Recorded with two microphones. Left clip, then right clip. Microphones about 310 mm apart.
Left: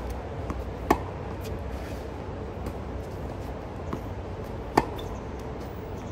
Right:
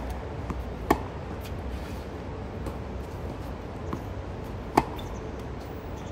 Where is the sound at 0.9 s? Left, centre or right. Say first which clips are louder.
Left 1 dB; centre.